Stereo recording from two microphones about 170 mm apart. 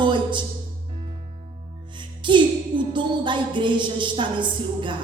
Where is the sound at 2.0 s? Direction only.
30° right (ahead or behind).